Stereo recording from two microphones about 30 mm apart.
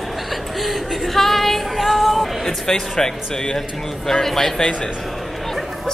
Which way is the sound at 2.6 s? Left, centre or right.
Left.